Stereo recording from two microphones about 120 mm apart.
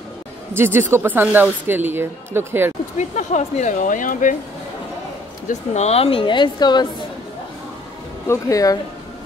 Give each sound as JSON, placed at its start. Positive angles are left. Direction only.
{"t": 0.6, "sound": "speech", "side_deg": -20}
{"t": 3.0, "sound": "speech", "side_deg": 85}
{"t": 5.5, "sound": "speech", "side_deg": 65}
{"t": 8.3, "sound": "speech", "side_deg": 30}